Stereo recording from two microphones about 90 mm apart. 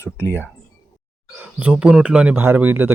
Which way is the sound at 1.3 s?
15° right (ahead or behind).